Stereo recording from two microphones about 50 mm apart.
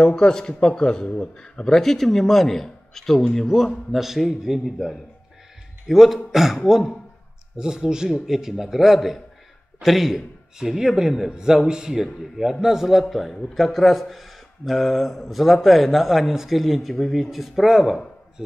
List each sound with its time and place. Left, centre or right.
0.0 s a man's voice: centre